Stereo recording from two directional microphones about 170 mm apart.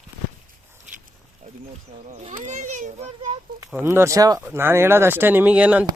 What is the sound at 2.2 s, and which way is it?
Children playing, 45° right (ahead or behind).